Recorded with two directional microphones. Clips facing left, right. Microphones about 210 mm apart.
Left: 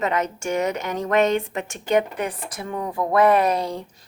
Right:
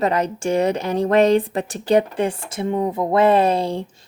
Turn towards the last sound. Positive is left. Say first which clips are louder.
# right 3 dB
turn(degrees=-30)  # may be behind; listen again after turning